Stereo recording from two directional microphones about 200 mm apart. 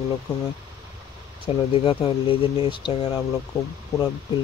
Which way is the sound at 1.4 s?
25° left (ahead or behind).